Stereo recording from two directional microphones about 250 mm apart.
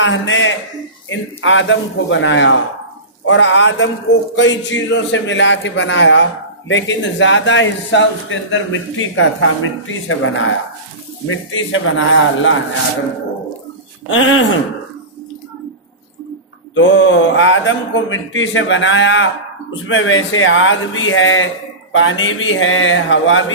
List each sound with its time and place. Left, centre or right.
0.0 s a man's voice: left
14.0 s a man's voice: left
16.7 s a man's voice: left